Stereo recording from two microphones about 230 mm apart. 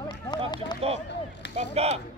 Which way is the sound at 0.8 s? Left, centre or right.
Right.